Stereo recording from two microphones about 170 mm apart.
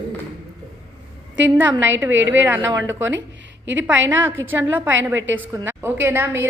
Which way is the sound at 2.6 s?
15° right (ahead or behind).